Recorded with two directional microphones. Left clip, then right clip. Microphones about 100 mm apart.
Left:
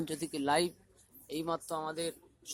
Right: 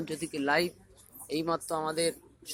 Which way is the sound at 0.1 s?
45° left (ahead or behind).